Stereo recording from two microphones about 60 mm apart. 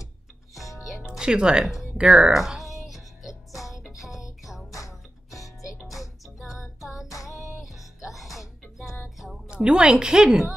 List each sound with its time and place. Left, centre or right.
1.1 s speech: centre
2.3 s music: centre
4.7 s music: left
5.9 s music: centre
9.5 s a woman's voice: centre